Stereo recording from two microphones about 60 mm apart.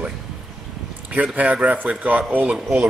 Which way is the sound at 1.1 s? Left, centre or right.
Right.